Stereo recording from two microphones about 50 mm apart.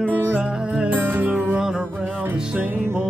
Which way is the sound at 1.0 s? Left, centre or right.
Right.